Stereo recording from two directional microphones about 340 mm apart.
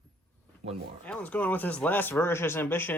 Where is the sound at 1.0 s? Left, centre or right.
Centre.